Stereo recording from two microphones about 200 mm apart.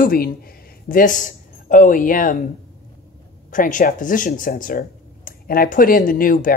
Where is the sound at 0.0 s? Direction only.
45° left (ahead or behind).